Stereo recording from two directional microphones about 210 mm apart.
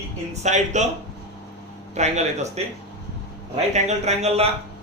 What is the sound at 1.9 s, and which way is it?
Speech, 30° right (ahead or behind).